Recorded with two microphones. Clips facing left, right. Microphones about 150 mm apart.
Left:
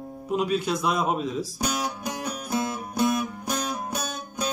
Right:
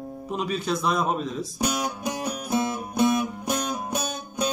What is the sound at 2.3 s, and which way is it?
Music, centre (ahead or behind).